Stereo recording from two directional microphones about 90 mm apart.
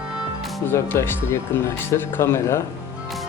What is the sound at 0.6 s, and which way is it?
Speech, 25° left (ahead or behind).